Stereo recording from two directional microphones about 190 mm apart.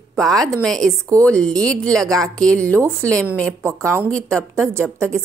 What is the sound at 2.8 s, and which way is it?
Speech, 15° right (ahead or behind).